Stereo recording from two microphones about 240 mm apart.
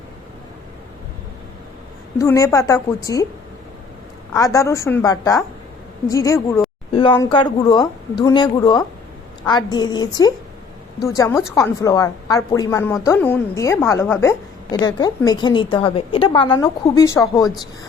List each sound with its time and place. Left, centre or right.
2.1 s a woman's voice: centre
4.4 s a woman's voice: centre